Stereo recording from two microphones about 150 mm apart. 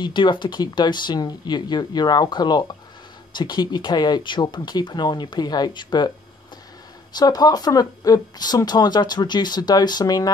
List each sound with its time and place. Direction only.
0.0 s speech: 30° left (ahead or behind)
7.2 s speech: 25° left (ahead or behind)